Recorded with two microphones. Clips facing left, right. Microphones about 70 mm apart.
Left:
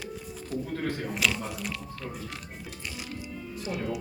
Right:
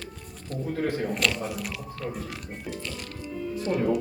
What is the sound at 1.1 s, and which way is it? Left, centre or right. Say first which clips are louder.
Speech: right 2 dB; centre.